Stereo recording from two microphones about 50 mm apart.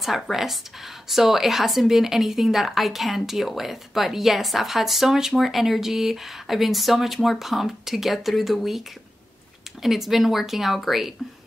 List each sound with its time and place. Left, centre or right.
0.0 s a woman's voice: centre
9.8 s a woman's voice: centre